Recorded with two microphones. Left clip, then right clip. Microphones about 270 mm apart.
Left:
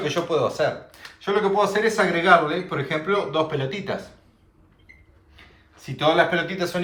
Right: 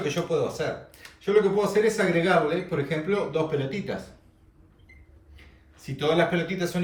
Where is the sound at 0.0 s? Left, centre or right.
Centre.